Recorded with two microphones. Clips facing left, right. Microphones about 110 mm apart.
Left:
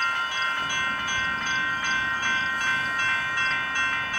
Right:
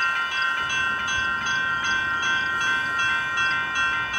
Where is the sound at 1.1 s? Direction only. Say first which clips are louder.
Right 2 dB; 20° right (ahead or behind).